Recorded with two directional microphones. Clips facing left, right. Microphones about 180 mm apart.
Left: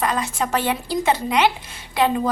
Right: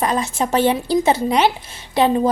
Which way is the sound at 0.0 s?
25° right (ahead or behind).